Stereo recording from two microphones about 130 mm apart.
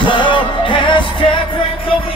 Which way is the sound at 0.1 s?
40° left (ahead or behind).